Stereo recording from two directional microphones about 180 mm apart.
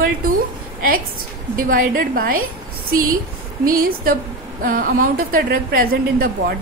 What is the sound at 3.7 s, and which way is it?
A woman's voice, 55° right (ahead or behind).